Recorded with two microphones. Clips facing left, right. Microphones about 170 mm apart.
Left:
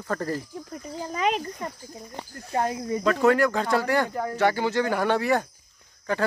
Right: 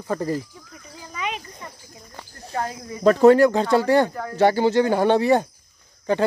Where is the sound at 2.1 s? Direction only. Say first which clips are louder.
Left 1 dB; 20° left (ahead or behind).